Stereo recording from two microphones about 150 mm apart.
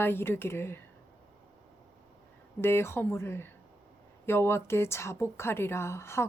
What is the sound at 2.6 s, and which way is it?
A woman's voice, 15° left (ahead or behind).